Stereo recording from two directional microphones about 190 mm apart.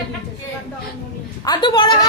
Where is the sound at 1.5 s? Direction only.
25° left (ahead or behind).